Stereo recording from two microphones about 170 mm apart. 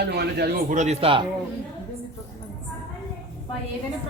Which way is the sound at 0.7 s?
40° right (ahead or behind).